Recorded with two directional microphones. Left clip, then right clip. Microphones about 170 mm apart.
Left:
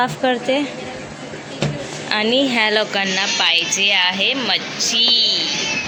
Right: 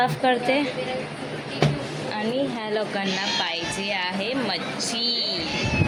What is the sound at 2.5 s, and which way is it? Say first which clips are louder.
Speech: left 10 dB; 15° left (ahead or behind).